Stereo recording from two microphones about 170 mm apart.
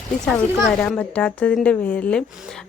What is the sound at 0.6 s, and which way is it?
A woman's voice, 5° left (ahead or behind).